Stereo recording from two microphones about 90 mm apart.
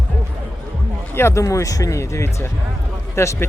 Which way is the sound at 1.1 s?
30° left (ahead or behind).